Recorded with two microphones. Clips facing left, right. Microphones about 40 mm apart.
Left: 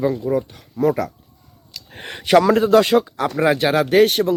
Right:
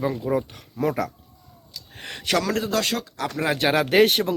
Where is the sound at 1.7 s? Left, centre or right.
Left.